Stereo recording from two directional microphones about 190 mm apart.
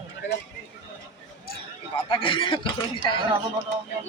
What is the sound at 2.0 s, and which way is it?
Speech, 25° left (ahead or behind).